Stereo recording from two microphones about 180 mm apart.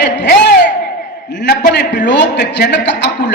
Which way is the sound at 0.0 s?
70° left (ahead or behind).